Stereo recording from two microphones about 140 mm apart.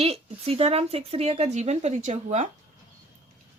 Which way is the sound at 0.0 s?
45° right (ahead or behind).